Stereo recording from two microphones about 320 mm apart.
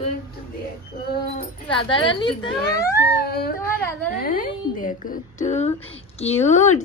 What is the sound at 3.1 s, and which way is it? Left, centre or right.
Speech, left.